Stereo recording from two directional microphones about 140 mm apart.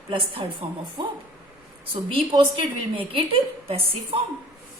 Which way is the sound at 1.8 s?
40° right (ahead or behind).